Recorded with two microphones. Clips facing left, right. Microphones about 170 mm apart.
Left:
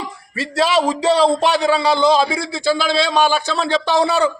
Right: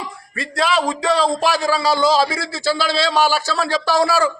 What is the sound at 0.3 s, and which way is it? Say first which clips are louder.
A man's voice: left 3 dB; 30° left (ahead or behind).